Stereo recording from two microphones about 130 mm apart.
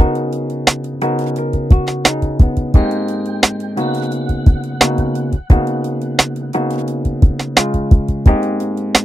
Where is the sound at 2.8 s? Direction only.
10° left (ahead or behind).